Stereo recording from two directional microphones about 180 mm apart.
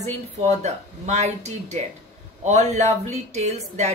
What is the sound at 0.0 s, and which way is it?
A woman's voice, 35° right (ahead or behind).